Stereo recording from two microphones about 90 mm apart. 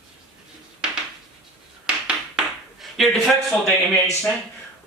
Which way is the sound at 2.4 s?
10° right (ahead or behind).